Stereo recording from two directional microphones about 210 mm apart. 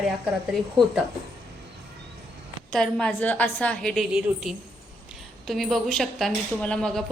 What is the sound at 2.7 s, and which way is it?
Speech, 5° left (ahead or behind).